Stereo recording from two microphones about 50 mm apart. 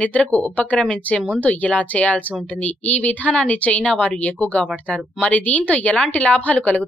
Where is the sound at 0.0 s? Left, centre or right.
Left.